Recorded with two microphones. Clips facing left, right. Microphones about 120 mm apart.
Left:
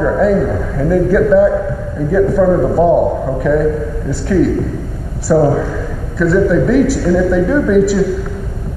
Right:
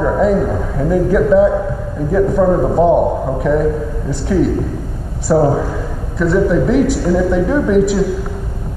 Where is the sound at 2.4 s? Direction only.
20° right (ahead or behind).